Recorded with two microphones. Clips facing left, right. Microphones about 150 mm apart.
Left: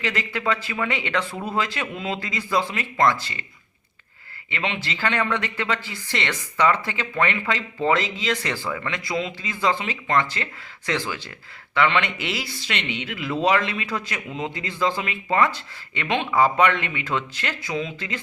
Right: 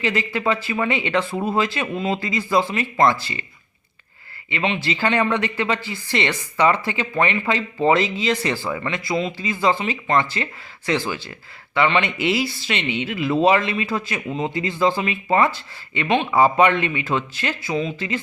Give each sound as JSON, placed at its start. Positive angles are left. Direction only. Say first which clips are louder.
{"t": 0.0, "sound": "speech", "louder": "right 4 dB", "side_deg": -5}
{"t": 4.5, "sound": "speech", "louder": "right 5 dB", "side_deg": -10}